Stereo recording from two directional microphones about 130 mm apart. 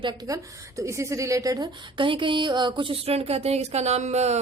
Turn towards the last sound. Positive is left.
turn(degrees=-60)  # may be behind; listen again after turning